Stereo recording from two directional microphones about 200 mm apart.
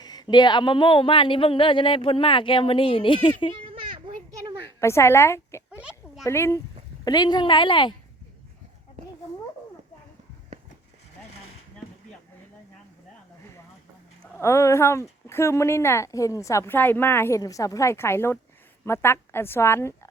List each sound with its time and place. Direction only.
0.0 s speech: 20° left (ahead or behind)
3.7 s children playing: 25° right (ahead or behind)
4.8 s a woman's voice: 15° left (ahead or behind)
5.7 s a sound: 5° right (ahead or behind)
6.2 s a woman's voice: 15° left (ahead or behind)
14.3 s a woman's voice: 15° left (ahead or behind)